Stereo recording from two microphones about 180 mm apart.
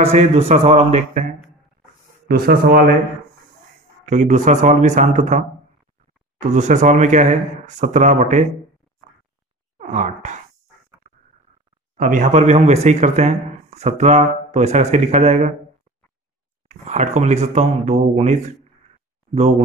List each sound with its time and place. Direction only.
0.0 s speech: 40° right (ahead or behind)
2.2 s speech: 55° right (ahead or behind)
4.0 s a man's voice: 40° right (ahead or behind)
6.4 s speech: 40° right (ahead or behind)
9.8 s a sound: 40° right (ahead or behind)
12.0 s speech: 45° right (ahead or behind)
16.6 s speech: 40° right (ahead or behind)